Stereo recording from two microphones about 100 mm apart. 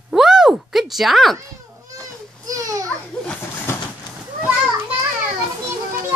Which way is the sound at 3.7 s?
25° left (ahead or behind).